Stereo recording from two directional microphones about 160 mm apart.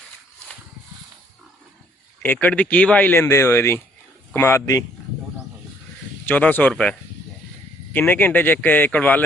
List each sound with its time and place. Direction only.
2.2 s speech: 10° left (ahead or behind)
6.2 s speech: 10° left (ahead or behind)